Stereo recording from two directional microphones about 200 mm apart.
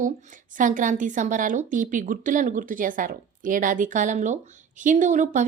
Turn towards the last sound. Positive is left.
turn(degrees=-40)  # may be behind; listen again after turning